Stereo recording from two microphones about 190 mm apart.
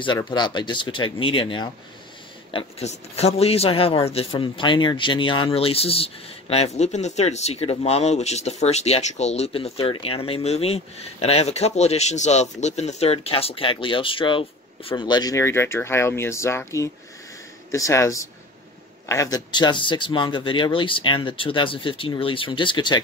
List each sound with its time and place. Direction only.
0.0 s speech: 25° left (ahead or behind)